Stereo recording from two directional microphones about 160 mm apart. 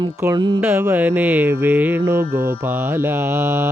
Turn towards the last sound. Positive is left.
turn(degrees=-15)  # may be behind; listen again after turning